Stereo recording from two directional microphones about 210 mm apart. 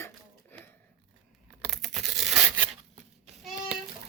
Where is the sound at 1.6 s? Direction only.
Centre (ahead or behind).